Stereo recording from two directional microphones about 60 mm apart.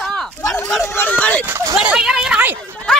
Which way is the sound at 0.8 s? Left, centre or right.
Left.